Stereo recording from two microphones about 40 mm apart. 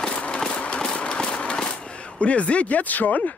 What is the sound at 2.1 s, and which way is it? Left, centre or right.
Speech, left.